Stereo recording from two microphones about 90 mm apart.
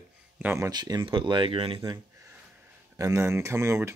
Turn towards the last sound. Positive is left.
turn(degrees=-30)  # may be behind; listen again after turning